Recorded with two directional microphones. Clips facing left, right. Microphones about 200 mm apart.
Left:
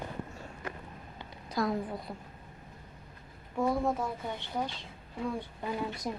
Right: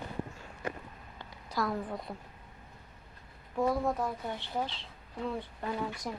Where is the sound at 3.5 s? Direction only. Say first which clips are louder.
Even; centre (ahead or behind).